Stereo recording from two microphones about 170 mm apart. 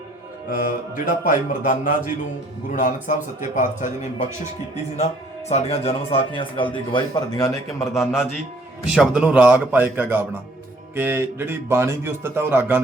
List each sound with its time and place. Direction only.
0.6 s mantra: 55° left (ahead or behind)
5.5 s speech: 35° left (ahead or behind)
7.9 s a man's voice: 5° right (ahead or behind)